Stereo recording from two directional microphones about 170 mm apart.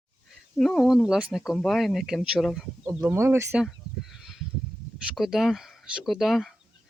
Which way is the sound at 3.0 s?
15° right (ahead or behind).